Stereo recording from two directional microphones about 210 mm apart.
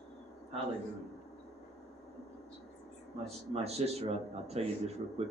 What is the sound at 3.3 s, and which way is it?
A man's voice, 30° right (ahead or behind).